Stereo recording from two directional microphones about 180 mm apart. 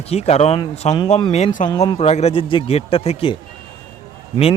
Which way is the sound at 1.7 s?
20° left (ahead or behind).